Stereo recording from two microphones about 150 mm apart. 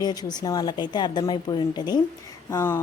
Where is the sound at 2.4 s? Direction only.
15° left (ahead or behind).